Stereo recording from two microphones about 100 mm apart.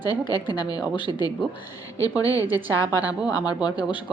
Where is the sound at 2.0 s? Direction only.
35° left (ahead or behind).